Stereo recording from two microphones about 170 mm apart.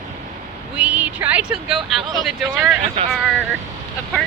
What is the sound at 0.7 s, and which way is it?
Speech, 10° right (ahead or behind).